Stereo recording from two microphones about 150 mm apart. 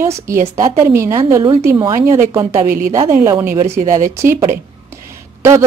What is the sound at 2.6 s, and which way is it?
Speech, 65° right (ahead or behind).